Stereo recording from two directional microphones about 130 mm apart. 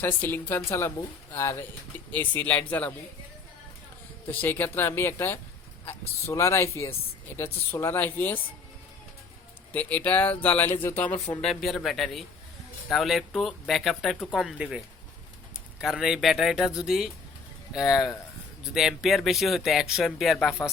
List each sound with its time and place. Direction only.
0.0 s speech: 15° left (ahead or behind)
4.3 s speech: 15° left (ahead or behind)
9.7 s speech: 15° left (ahead or behind)
11.3 s speech: 5° left (ahead or behind)
15.8 s speech: 5° right (ahead or behind)